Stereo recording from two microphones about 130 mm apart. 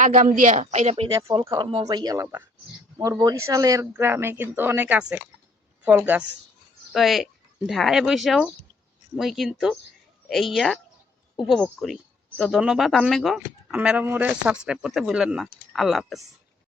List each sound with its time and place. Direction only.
0.0 s speech: 85° right; by 1.0 s 55° right (ahead or behind)
1.0 s speech: 35° right (ahead or behind); by 6.2 s 15° right (ahead or behind)
6.9 s speech: centre (ahead or behind)